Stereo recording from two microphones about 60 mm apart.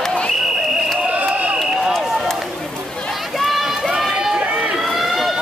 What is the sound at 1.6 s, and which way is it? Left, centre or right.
Run, centre.